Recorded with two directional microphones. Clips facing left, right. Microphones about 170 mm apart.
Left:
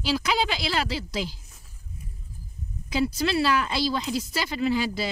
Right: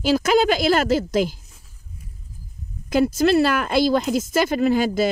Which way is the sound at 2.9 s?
50° right (ahead or behind).